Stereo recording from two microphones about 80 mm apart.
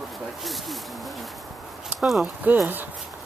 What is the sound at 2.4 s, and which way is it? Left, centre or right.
Speech, right.